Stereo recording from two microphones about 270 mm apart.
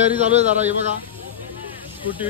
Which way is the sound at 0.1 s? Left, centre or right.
Right.